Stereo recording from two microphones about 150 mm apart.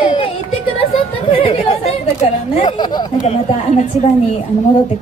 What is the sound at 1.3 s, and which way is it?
Chatter, 35° left (ahead or behind).